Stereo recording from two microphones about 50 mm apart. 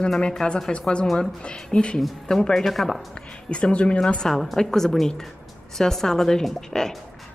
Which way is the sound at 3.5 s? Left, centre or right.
Left.